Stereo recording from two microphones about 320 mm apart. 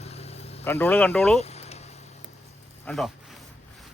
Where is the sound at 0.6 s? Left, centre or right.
Centre.